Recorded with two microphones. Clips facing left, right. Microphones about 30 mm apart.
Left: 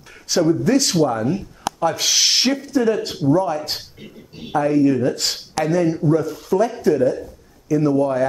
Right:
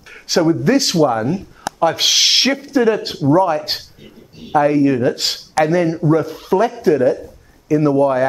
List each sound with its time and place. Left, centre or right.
0.3 s speech: right